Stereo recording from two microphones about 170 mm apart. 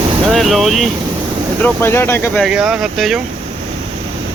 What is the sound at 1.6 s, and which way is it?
Speech, 10° left (ahead or behind).